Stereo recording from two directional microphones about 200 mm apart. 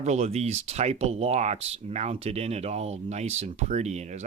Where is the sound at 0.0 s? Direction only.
35° right (ahead or behind).